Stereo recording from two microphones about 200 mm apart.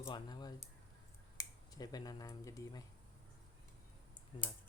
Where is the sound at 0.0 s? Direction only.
20° left (ahead or behind).